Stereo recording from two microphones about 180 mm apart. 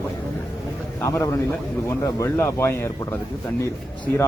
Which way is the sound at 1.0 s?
15° left (ahead or behind).